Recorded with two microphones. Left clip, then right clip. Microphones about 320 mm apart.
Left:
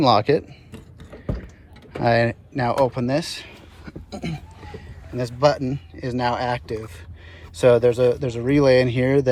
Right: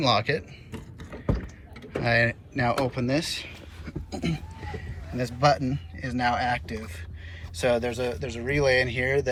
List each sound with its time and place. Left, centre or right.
0.0 s speech: centre
2.0 s speech: centre
2.8 s a sound: centre
5.1 s speech: centre